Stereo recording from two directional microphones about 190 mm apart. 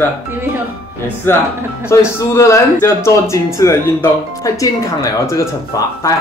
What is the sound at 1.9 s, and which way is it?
Speech, 15° left (ahead or behind).